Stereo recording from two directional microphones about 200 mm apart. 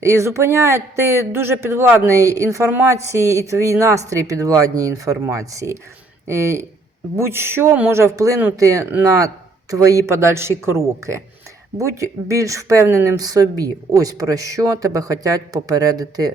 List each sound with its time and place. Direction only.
0.0 s speech: 15° right (ahead or behind)